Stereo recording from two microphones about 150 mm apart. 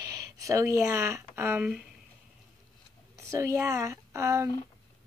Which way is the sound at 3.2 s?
20° right (ahead or behind).